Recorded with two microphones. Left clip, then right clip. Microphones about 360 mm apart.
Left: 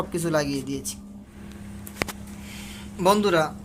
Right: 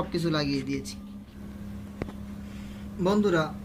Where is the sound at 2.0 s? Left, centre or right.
Left.